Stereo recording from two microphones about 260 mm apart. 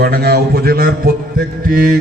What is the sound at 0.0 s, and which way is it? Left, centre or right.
A man's voice, right.